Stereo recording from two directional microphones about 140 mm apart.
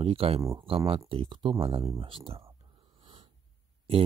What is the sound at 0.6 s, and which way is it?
Speech, 40° right (ahead or behind).